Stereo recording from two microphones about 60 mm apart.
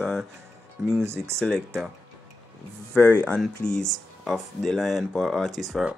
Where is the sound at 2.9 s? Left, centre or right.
Left.